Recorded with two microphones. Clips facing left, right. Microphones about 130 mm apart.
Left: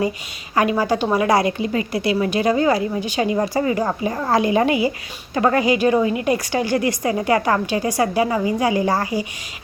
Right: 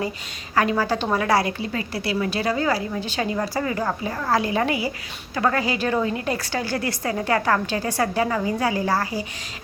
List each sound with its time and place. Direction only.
0.5 s a woman's voice: 15° left (ahead or behind)